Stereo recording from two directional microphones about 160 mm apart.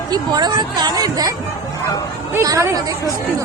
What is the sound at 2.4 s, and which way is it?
Speech, 15° right (ahead or behind).